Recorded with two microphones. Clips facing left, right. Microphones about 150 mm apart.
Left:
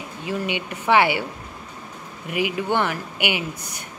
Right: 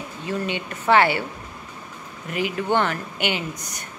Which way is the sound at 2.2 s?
10° left (ahead or behind).